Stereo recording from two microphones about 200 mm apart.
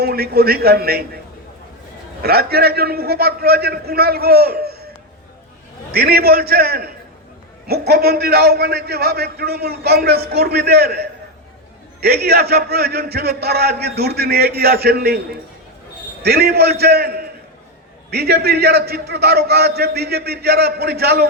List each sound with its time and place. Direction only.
0.0 s a man's voice: 50° right (ahead or behind)
2.2 s a man's voice: 50° right (ahead or behind)
5.9 s a man's voice: 50° right (ahead or behind)
16.2 s a man's voice: 50° right (ahead or behind)